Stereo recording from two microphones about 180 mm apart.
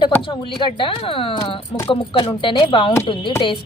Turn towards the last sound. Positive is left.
turn(degrees=30)  # may be behind; listen again after turning